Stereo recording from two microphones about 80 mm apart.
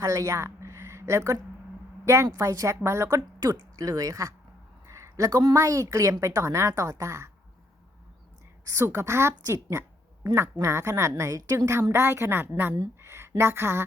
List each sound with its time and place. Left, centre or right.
0.0 s a woman's voice: right
3.4 s speech: right
4.9 s a sound: right
5.5 s speech: right
8.6 s speech: right